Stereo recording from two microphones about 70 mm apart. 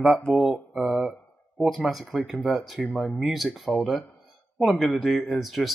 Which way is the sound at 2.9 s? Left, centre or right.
Centre.